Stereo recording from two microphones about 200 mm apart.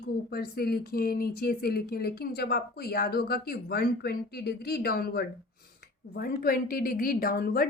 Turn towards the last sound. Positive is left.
turn(degrees=45)  # may be behind; listen again after turning